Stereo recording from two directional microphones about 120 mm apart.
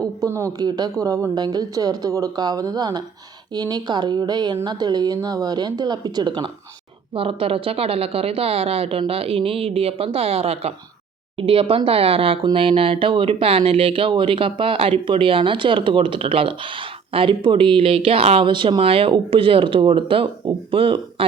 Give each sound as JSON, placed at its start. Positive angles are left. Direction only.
{"t": 0.0, "sound": "a woman's voice", "side_deg": -25}
{"t": 7.2, "sound": "speech", "side_deg": -50}